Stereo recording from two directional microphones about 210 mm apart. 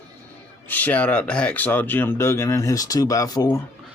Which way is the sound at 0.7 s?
10° left (ahead or behind).